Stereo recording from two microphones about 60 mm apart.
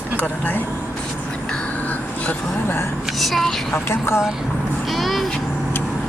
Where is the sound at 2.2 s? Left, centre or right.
Left.